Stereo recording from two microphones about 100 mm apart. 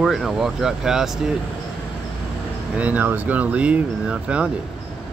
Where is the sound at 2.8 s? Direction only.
15° right (ahead or behind).